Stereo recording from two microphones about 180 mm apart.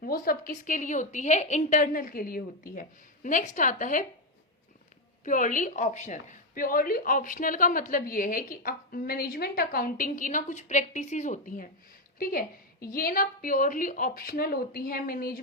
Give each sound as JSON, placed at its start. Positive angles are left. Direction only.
{"t": 0.0, "sound": "a woman's voice", "side_deg": 55}
{"t": 5.2, "sound": "a woman's voice", "side_deg": 45}